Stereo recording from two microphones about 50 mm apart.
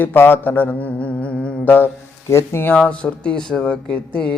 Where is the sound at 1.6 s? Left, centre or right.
Left.